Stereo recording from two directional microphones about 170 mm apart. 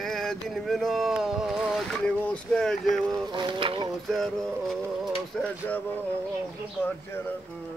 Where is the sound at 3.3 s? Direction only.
30° right (ahead or behind).